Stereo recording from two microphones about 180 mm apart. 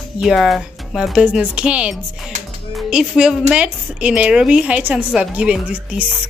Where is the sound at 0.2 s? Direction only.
Centre (ahead or behind).